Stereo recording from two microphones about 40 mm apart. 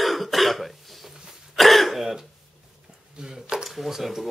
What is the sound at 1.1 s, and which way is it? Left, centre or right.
Throat clearing, centre.